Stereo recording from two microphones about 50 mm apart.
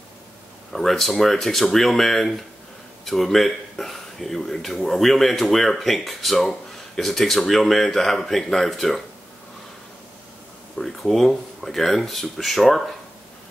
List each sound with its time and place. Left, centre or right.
0.7 s speech: centre
10.8 s speech: centre